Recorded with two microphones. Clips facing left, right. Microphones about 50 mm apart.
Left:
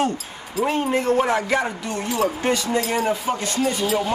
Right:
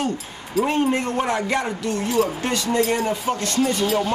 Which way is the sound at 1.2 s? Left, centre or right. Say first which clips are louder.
Left 2 dB; centre.